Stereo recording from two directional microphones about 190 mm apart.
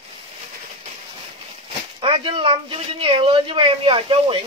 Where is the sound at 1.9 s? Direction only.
25° right (ahead or behind).